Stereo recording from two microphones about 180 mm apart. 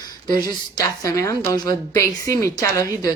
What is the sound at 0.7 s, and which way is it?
A woman's voice, 20° left (ahead or behind).